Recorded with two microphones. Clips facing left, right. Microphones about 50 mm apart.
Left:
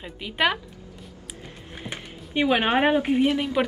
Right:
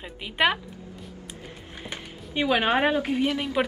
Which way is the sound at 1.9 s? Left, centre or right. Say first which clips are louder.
Left 3 dB; centre.